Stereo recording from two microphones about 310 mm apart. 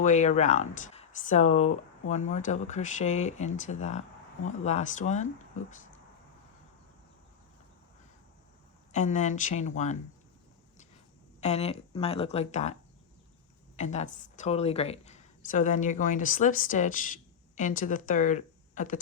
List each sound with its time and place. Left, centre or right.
0.0 s speech: left
8.9 s speech: left
11.3 s speech: left
13.7 s speech: left